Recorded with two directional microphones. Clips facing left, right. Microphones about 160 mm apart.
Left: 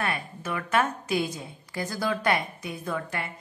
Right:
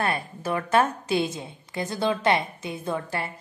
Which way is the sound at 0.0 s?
35° right (ahead or behind).